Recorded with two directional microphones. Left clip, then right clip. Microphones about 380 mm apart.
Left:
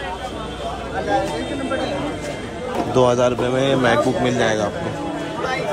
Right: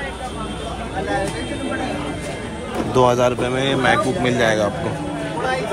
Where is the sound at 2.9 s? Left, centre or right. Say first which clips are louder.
Right 1 dB; centre.